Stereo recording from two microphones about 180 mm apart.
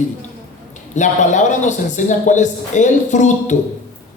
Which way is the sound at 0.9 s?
40° left (ahead or behind).